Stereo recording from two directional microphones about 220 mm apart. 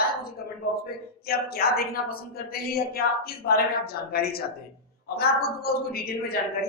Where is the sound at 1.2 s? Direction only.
45° left (ahead or behind).